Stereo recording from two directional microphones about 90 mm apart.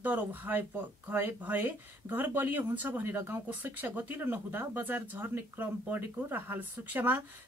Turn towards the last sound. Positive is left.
turn(degrees=-20)  # may be behind; listen again after turning